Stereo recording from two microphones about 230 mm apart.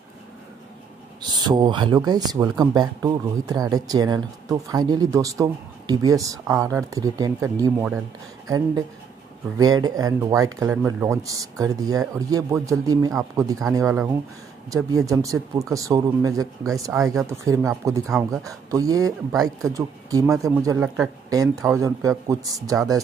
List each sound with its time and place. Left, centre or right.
1.3 s speech: centre